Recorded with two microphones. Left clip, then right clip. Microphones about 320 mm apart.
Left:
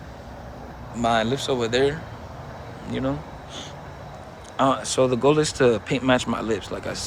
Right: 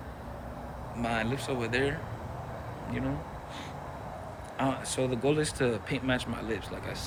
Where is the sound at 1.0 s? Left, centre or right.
Centre.